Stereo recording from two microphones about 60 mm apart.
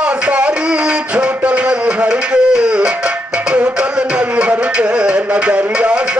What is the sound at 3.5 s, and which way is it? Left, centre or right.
Music, right.